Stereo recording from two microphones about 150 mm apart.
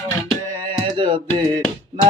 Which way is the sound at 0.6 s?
35° right (ahead or behind).